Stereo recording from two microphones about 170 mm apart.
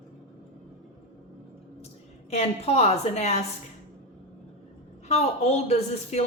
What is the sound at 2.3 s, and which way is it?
A woman's voice, 40° left (ahead or behind).